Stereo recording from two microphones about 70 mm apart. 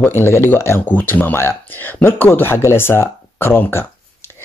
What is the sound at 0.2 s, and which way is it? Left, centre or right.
Speech, left.